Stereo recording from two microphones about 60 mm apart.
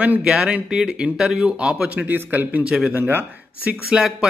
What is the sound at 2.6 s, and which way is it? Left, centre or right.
Speech, centre.